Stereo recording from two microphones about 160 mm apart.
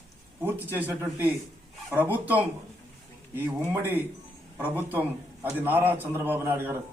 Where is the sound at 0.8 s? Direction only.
10° right (ahead or behind).